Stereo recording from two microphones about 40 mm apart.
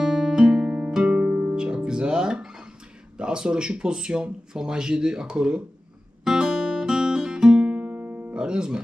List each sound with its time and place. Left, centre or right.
0.0 s music: centre
3.2 s speech: right
6.2 s guitar: centre
7.7 s music: right
8.3 s music: right